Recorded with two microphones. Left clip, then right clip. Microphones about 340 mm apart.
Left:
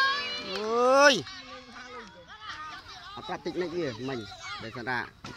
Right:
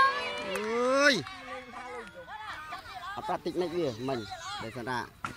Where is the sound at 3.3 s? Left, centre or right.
Centre.